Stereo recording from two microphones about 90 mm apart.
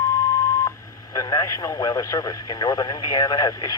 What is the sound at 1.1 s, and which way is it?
Speech, 40° left (ahead or behind).